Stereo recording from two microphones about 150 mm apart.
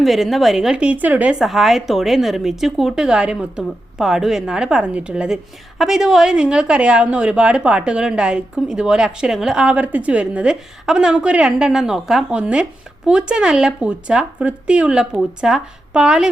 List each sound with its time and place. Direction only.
0.0 s a woman's voice: centre (ahead or behind)